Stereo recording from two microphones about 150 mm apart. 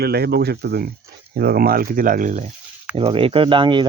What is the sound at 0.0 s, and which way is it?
Speech, 90° right.